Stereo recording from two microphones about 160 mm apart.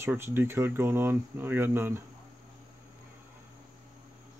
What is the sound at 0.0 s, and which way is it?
Speech, 15° right (ahead or behind).